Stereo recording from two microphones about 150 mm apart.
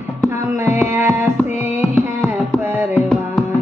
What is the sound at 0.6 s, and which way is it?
Music, 15° right (ahead or behind).